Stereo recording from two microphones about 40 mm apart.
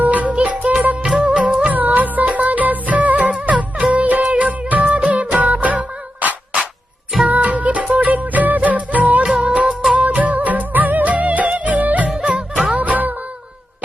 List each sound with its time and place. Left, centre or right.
0.0 s music: right
1.2 s music of bollywood: right
1.7 s music: right
3.9 s music of bollywood: right
5.1 s music: right
9.2 s music of bollywood: right
9.9 s music: right